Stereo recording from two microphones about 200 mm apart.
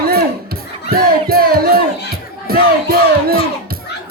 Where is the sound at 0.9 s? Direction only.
50° right (ahead or behind).